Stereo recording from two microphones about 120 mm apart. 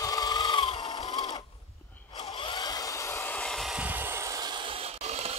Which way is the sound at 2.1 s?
35° left (ahead or behind).